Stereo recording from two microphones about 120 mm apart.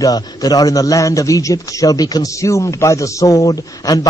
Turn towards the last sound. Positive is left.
turn(degrees=30)  # may be behind; listen again after turning